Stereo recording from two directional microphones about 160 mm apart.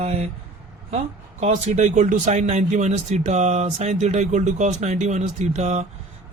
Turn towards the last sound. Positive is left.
turn(degrees=-45)  # may be behind; listen again after turning